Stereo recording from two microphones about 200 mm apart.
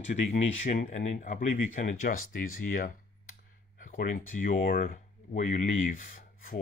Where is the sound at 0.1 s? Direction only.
35° left (ahead or behind).